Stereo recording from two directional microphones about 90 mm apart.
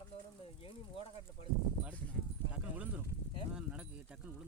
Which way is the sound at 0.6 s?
80° left.